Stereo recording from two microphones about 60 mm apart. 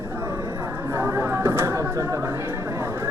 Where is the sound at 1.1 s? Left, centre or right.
Right.